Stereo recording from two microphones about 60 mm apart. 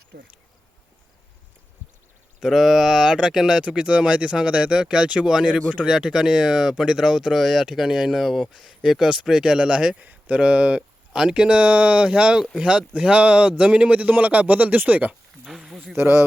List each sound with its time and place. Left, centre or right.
2.4 s speech: centre
10.0 s speech: right
15.4 s speech: centre
16.0 s speech: right